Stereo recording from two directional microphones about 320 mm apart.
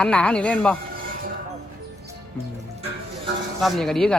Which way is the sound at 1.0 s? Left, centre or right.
Right.